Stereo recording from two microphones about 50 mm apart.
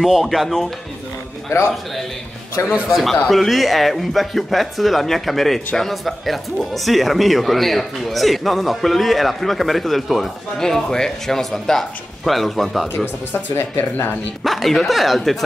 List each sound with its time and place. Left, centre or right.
0.0 s speech: centre
1.5 s a man's voice: left
2.9 s speech: centre
10.6 s speech: centre
13.3 s speech: left
14.4 s speech: centre